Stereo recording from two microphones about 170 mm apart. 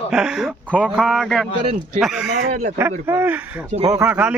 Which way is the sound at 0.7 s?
5° left (ahead or behind).